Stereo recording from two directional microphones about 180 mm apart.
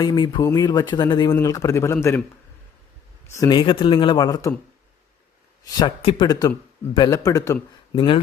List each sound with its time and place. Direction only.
0.0 s a man's voice: 25° left (ahead or behind)
3.3 s speech: 20° left (ahead or behind)
5.8 s speech: 30° left (ahead or behind)
7.9 s speech: 30° left (ahead or behind)